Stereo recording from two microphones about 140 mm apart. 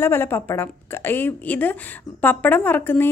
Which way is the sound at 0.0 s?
15° left (ahead or behind).